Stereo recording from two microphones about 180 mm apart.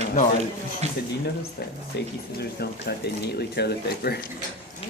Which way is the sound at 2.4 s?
65° left (ahead or behind).